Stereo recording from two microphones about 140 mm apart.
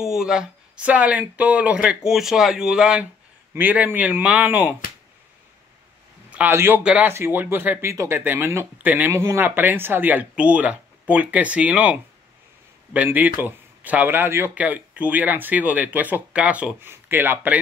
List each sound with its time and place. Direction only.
0.0 s speech: 5° right (ahead or behind)
6.3 s a man's voice: 15° right (ahead or behind)